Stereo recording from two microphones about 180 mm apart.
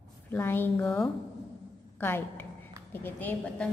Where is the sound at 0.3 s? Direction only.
10° left (ahead or behind).